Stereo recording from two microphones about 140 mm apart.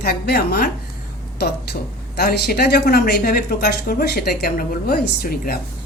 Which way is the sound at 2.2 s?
90° left.